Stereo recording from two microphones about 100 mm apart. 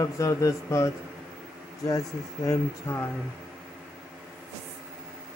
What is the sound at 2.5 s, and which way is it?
Mantra, 30° left (ahead or behind).